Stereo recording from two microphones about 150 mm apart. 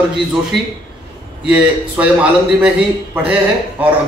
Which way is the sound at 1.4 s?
10° right (ahead or behind).